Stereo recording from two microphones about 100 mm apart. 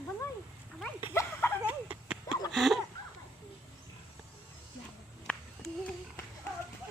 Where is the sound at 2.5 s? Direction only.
Centre (ahead or behind).